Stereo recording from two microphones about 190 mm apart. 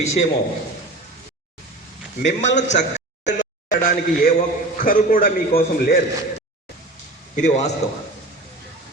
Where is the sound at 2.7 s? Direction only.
40° left (ahead or behind).